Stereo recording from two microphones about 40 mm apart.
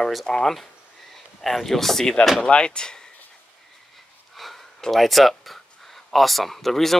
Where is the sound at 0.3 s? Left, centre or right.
Centre.